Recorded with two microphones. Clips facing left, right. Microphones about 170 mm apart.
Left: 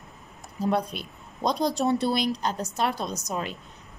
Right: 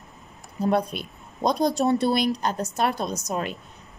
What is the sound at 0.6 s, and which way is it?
A woman's voice, 55° right (ahead or behind).